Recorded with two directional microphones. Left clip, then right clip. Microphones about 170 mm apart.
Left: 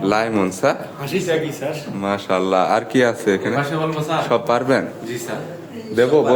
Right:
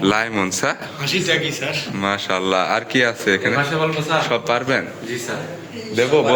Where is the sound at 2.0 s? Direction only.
10° left (ahead or behind).